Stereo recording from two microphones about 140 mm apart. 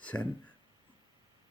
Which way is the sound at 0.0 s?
10° left (ahead or behind).